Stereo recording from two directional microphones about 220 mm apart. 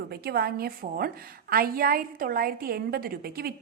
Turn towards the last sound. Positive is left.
turn(degrees=-45)  # may be behind; listen again after turning